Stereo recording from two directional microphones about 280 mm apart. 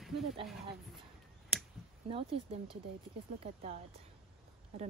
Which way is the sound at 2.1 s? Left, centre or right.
Centre.